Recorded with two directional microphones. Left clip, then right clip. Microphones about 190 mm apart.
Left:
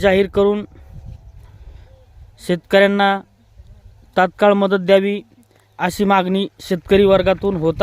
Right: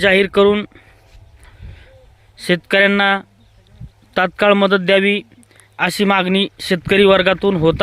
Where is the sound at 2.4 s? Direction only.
10° left (ahead or behind).